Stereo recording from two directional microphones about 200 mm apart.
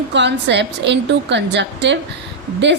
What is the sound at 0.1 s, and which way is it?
A woman's voice, 60° right (ahead or behind).